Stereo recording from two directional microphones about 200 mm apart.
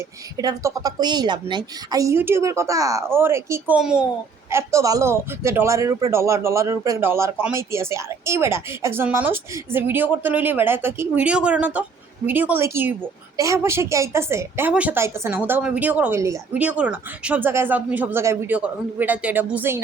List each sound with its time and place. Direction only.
0.3 s speech: 15° right (ahead or behind)
4.5 s speech: 15° right (ahead or behind)